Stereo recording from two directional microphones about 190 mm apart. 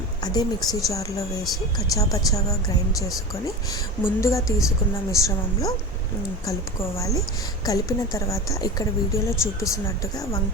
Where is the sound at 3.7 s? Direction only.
15° left (ahead or behind).